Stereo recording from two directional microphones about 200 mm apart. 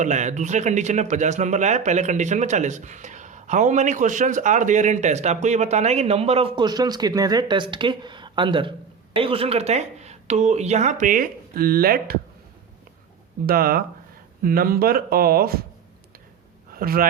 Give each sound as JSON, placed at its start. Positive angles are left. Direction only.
{"t": 0.0, "sound": "a man's voice", "side_deg": -35}
{"t": 13.4, "sound": "speech", "side_deg": -50}
{"t": 16.7, "sound": "speech", "side_deg": -45}